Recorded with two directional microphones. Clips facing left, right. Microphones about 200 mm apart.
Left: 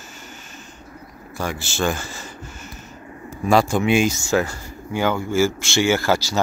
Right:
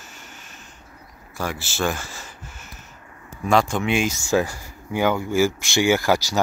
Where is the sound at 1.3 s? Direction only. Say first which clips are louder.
Left 2 dB; centre (ahead or behind).